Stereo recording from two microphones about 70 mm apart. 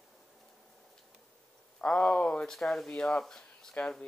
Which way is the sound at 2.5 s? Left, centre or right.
Centre.